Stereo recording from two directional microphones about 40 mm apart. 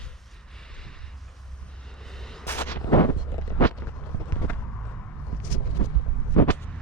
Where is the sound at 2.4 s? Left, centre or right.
Left.